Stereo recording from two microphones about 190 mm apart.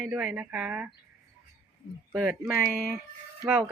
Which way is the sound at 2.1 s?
5° right (ahead or behind).